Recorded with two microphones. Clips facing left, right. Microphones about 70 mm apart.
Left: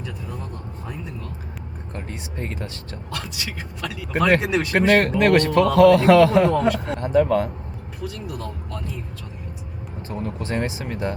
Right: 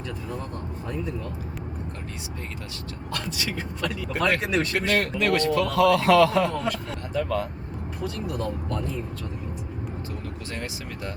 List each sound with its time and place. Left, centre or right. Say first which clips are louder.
3.1 s speech: right 1 dB; centre
4.9 s speech: left 9 dB; left
8.0 s speech: right 2 dB; centre
10.1 s speech: left 7 dB; left